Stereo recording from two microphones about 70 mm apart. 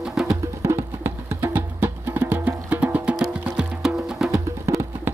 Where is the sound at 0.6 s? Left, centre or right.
Right.